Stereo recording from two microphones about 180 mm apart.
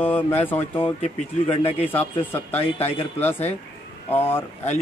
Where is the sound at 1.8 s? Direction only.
10° left (ahead or behind).